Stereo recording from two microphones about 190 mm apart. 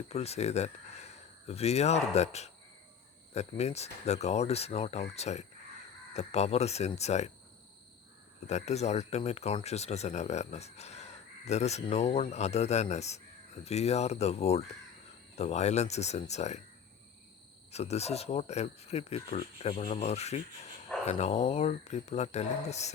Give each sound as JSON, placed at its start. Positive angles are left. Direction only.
{"t": 0.1, "sound": "speech", "side_deg": 35}
{"t": 8.4, "sound": "speech", "side_deg": 35}
{"t": 17.7, "sound": "speech", "side_deg": 35}